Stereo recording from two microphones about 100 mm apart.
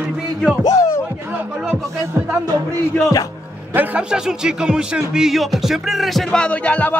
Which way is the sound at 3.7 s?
10° right (ahead or behind).